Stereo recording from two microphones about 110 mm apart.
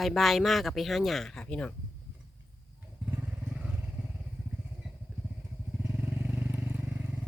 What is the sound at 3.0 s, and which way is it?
Motorcycle, 20° right (ahead or behind).